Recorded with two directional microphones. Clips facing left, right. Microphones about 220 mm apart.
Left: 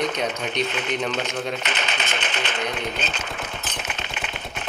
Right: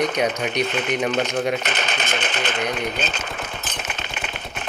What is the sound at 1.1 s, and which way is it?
Speech, 45° right (ahead or behind).